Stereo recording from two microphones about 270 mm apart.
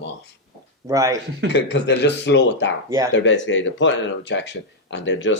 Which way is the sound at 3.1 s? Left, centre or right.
Left.